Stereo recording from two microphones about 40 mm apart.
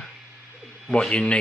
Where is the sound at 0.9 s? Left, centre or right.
Left.